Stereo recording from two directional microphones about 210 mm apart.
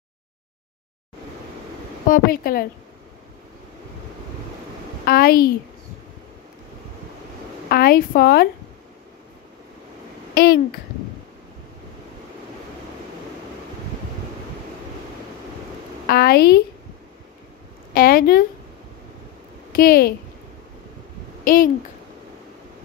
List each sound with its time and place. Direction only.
2.0 s speech: 45° left (ahead or behind)
5.0 s a woman's voice: 45° left (ahead or behind)
7.7 s a woman's voice: 45° left (ahead or behind)
10.3 s a child's voice: 50° left (ahead or behind)
16.1 s a woman's voice: 50° left (ahead or behind)
17.9 s a woman's voice: 45° left (ahead or behind)
19.7 s speech: 45° left (ahead or behind)